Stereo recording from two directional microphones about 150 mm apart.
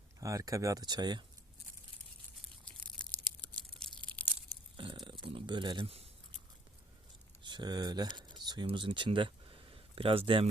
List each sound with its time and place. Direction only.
0.2 s speech: 20° right (ahead or behind)
2.6 s crushing: 5° left (ahead or behind)
3.8 s a sound: 10° left (ahead or behind)
4.8 s burping: 35° right (ahead or behind)
5.2 s speech: 35° right (ahead or behind)
7.4 s speech: 30° right (ahead or behind)